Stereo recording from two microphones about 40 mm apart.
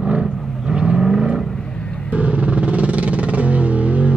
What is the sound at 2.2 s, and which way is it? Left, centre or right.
Music, right.